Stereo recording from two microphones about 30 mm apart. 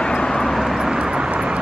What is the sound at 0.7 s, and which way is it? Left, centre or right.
Vehicle, centre.